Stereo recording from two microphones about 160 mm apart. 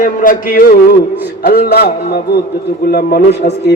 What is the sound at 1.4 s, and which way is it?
Speech, 85° left.